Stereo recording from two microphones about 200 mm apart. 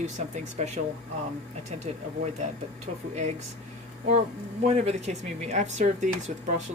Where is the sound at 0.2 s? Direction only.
35° right (ahead or behind).